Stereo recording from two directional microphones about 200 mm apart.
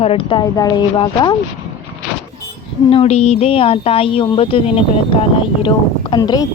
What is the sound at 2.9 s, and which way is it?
Speech, 30° left (ahead or behind).